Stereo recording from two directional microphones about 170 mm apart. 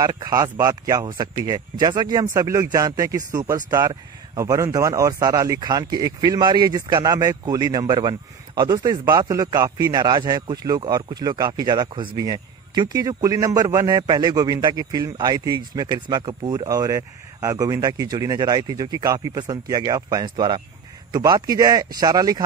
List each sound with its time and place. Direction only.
0.0 s speech: 20° right (ahead or behind)